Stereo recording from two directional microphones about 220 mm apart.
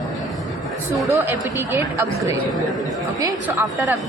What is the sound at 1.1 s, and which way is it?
Speech, 10° right (ahead or behind).